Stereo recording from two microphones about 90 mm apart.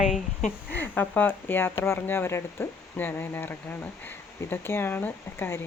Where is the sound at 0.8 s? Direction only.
20° left (ahead or behind).